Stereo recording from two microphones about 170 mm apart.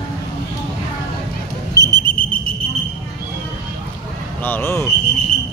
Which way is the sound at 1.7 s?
25° right (ahead or behind).